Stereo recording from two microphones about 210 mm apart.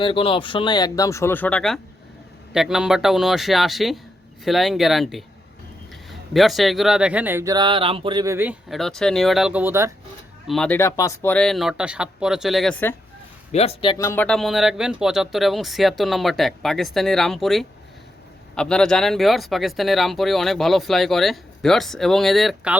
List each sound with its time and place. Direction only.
0.0 s speech: 25° left (ahead or behind); by 9.9 s 10° right (ahead or behind)
10.4 s speech: centre (ahead or behind)
13.5 s speech: 30° left (ahead or behind)
13.9 s speech: 15° left (ahead or behind)